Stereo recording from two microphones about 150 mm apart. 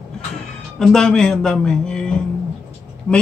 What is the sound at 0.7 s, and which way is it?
A man's voice, 5° left (ahead or behind).